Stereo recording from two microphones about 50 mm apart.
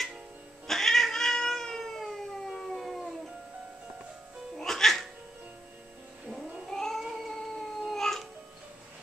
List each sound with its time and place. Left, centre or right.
0.7 s cat: centre
4.6 s music: centre
6.7 s cat: centre
7.0 s a sound: centre